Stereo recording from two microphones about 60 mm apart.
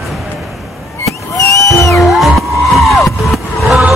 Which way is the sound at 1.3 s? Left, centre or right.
Left.